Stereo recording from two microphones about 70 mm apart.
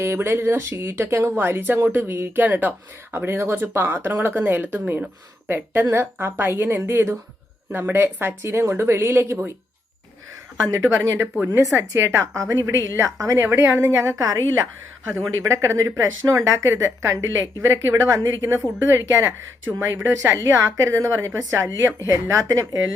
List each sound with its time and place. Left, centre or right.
0.0 s speech: right
10.8 s speech: right
11.3 s speech: right
11.6 s speech: right
13.4 s speech: right